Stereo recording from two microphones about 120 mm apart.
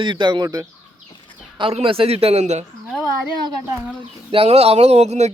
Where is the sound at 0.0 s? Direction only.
40° right (ahead or behind).